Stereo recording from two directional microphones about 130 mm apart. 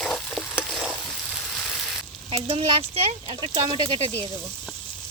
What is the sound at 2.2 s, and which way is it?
Speech, 50° right (ahead or behind).